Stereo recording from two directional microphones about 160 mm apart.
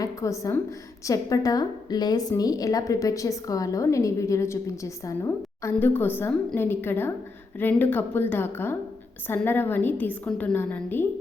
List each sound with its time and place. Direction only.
0.0 s a woman's voice: 20° left (ahead or behind)